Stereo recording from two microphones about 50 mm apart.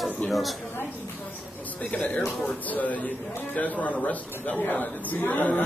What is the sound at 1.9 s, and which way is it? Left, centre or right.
A man's voice, left.